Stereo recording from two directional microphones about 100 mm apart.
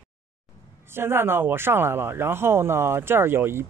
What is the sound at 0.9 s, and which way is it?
Speech, 25° right (ahead or behind).